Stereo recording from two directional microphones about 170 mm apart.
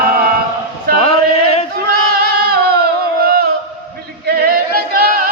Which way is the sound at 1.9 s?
65° right (ahead or behind).